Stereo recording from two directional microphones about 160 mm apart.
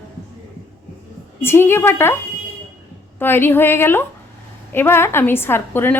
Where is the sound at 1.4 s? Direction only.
15° left (ahead or behind).